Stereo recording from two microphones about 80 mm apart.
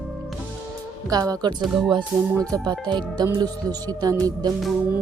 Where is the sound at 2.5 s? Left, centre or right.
Right.